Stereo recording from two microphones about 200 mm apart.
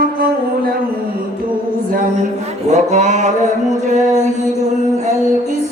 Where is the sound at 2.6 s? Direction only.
35° right (ahead or behind).